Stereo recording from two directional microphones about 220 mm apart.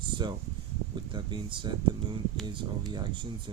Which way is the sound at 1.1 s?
20° right (ahead or behind).